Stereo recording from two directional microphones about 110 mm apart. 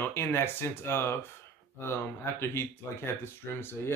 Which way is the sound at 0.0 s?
20° left (ahead or behind).